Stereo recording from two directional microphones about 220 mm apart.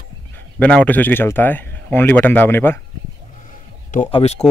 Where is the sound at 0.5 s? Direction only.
5° left (ahead or behind).